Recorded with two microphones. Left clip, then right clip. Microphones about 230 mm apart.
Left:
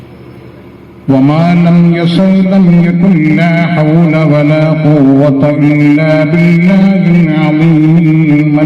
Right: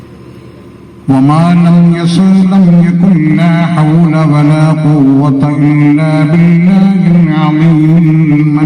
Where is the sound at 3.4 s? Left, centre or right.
Right.